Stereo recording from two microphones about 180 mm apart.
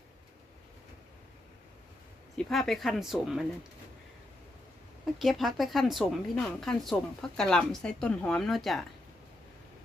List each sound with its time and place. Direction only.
2.3 s speech: centre (ahead or behind)
5.2 s speech: centre (ahead or behind)